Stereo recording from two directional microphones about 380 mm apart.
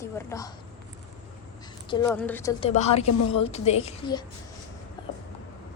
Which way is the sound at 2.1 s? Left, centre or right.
Centre.